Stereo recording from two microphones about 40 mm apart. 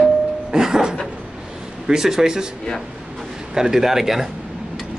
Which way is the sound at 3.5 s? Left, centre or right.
Centre.